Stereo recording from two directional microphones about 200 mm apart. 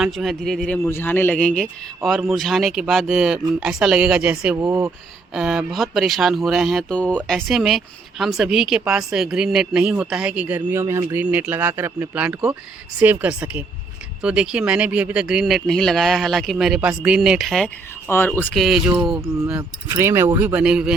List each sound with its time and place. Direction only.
0.0 s speech: centre (ahead or behind)